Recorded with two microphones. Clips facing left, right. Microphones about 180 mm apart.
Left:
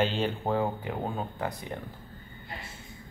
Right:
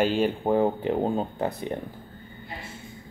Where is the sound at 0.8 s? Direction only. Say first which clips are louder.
Right 8 dB; 30° right (ahead or behind).